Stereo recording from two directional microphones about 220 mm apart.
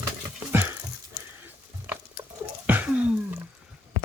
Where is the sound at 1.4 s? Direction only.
10° right (ahead or behind).